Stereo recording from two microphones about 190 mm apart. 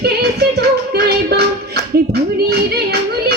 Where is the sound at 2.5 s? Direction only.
55° right (ahead or behind).